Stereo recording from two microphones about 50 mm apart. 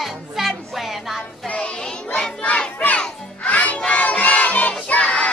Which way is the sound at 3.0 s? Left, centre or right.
Left.